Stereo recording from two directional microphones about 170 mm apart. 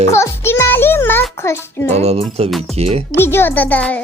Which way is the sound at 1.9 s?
35° right (ahead or behind).